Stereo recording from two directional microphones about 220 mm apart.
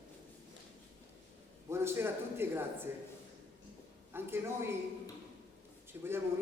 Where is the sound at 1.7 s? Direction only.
10° right (ahead or behind).